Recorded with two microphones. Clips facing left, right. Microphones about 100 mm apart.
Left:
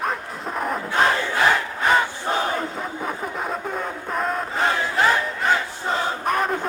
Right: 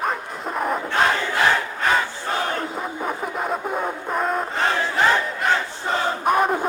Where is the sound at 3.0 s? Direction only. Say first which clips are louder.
Right 3 dB; 5° right (ahead or behind).